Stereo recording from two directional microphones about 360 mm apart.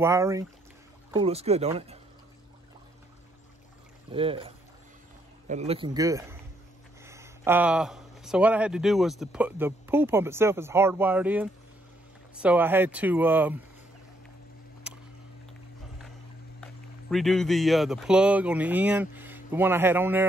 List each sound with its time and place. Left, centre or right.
0.0 s speech: centre
4.1 s speech: centre
17.1 s speech: centre